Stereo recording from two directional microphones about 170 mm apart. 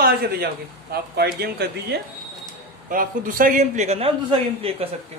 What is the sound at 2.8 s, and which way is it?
A man's voice, 55° right (ahead or behind).